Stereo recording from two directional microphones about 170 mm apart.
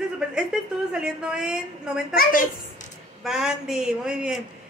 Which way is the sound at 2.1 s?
55° left (ahead or behind).